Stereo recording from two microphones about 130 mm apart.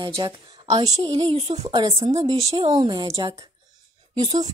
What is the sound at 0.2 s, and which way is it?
Speech, 35° right (ahead or behind).